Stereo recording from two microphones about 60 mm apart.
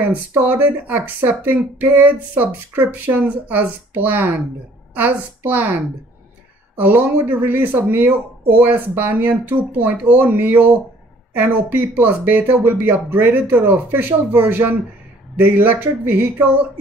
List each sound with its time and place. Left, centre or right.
0.0 s a woman's voice: right
6.8 s speech: right